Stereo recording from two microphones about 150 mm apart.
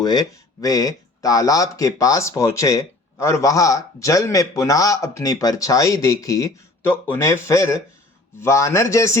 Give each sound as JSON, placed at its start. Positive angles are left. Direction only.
{"t": 0.0, "sound": "speech", "side_deg": 25}